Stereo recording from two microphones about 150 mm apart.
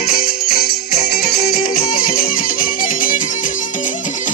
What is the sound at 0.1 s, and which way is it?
Music, 80° left.